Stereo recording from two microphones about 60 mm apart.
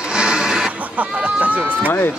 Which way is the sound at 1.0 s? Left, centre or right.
Right.